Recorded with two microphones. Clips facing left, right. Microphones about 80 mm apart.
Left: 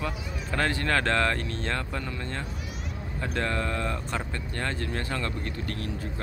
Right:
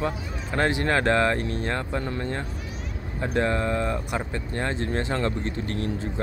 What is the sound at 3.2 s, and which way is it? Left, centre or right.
Speech, centre.